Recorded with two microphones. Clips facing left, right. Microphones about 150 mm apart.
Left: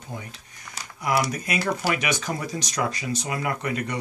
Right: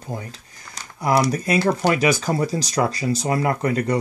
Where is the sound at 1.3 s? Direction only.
35° right (ahead or behind).